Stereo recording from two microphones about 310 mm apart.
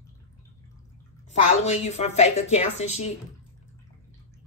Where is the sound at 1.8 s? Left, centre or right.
Left.